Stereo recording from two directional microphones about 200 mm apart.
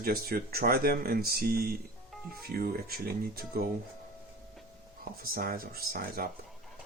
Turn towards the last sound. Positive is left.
turn(degrees=-45)  # may be behind; listen again after turning